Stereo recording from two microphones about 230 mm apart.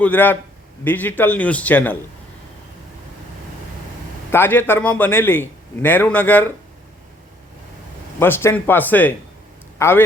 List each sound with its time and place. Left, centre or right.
0.0 s a man's voice: centre
4.3 s a man's voice: centre
8.2 s a man's voice: centre